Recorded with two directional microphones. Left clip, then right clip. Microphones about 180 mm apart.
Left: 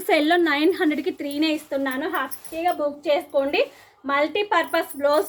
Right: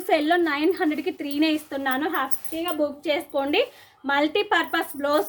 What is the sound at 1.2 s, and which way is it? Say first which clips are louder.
A woman's voice: even; 20° right (ahead or behind).